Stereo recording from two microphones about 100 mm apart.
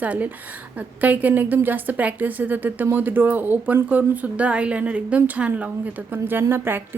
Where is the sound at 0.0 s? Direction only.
15° right (ahead or behind).